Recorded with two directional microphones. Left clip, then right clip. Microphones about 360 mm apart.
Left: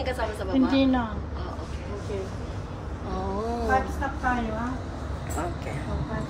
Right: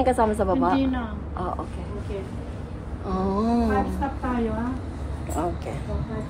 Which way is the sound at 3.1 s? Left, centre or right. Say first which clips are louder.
Right 5 dB; right.